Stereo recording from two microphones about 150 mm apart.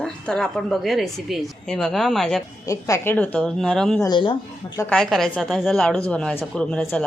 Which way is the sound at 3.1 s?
5° left (ahead or behind).